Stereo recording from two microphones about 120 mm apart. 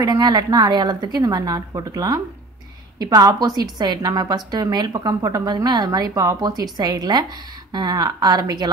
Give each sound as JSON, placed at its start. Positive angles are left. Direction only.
{"t": 0.0, "sound": "a woman's voice", "side_deg": -30}